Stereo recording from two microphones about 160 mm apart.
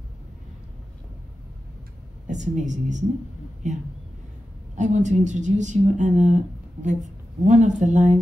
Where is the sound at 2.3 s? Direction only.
50° right (ahead or behind).